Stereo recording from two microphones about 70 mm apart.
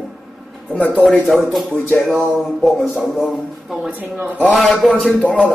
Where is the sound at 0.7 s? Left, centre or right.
Left.